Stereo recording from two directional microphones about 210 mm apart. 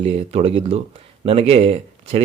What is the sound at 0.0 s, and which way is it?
Speech, 30° right (ahead or behind).